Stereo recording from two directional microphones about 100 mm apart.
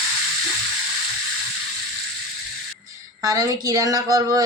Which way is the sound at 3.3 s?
35° right (ahead or behind).